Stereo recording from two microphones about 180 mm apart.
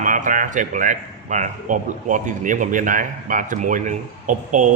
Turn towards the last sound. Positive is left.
turn(degrees=-45)  # may be behind; listen again after turning